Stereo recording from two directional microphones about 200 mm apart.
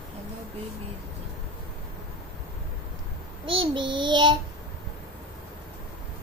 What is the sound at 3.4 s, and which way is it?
Child singing, 25° right (ahead or behind).